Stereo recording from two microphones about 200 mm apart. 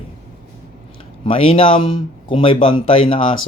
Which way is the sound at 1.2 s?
25° left (ahead or behind).